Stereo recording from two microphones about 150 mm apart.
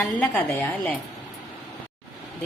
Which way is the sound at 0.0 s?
10° left (ahead or behind).